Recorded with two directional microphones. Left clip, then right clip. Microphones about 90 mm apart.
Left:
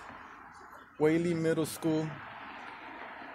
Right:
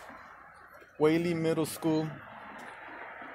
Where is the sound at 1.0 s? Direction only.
20° left (ahead or behind).